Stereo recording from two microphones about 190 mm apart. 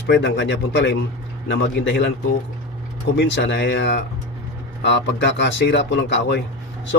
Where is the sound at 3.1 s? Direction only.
70° left (ahead or behind).